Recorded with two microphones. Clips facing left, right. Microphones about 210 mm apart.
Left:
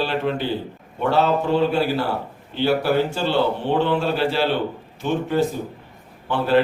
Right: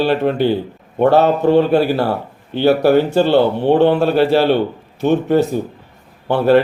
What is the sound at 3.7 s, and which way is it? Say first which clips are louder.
A man's voice: right 8 dB; 55° right (ahead or behind).